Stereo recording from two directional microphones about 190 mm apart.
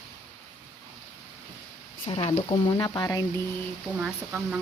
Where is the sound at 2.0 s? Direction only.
30° left (ahead or behind).